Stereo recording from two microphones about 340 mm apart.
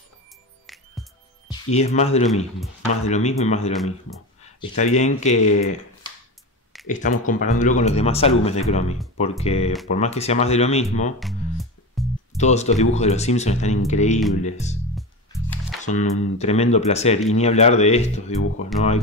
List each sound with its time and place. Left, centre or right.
1.5 s speech: centre
11.1 s music: centre
12.4 s speech: centre
15.0 s music: centre
15.8 s speech: left